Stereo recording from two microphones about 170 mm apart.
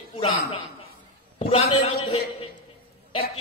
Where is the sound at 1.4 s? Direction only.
35° left (ahead or behind).